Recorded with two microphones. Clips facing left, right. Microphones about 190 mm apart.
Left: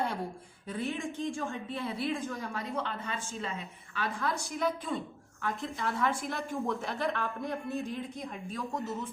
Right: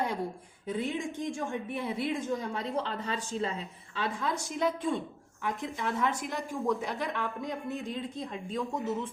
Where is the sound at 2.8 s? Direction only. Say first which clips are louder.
Right 3 dB; 35° right (ahead or behind).